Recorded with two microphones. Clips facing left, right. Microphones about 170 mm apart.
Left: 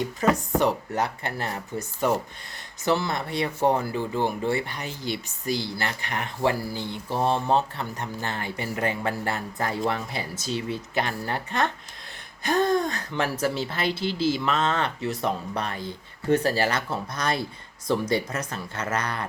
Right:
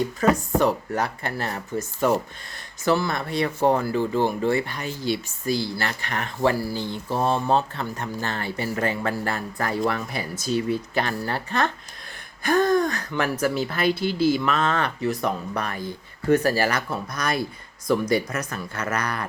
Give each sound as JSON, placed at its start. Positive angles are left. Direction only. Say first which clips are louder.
{"t": 0.2, "sound": "speech", "louder": "right 2 dB", "side_deg": 20}
{"t": 14.0, "sound": "speech", "louder": "right 2 dB", "side_deg": -50}
{"t": 14.4, "sound": "speech", "louder": "right 2 dB", "side_deg": 25}